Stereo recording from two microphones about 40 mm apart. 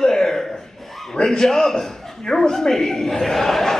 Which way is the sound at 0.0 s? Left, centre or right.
Centre.